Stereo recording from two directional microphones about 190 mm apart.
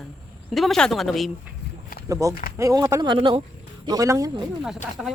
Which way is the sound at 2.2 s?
15° right (ahead or behind).